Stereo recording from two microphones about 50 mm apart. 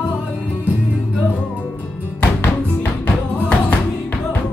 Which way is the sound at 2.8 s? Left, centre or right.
Left.